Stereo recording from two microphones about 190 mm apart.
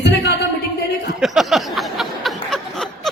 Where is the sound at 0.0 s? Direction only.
60° left (ahead or behind).